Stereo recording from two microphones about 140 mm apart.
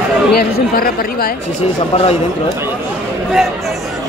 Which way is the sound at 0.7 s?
90° left.